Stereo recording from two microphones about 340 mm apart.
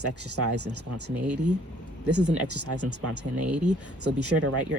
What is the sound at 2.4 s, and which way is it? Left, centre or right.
Speech, right.